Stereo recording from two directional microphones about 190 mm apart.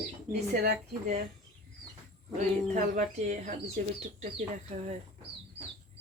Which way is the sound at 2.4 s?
40° right (ahead or behind).